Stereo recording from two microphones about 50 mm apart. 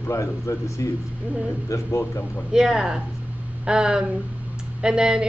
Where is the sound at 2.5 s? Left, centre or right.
Centre.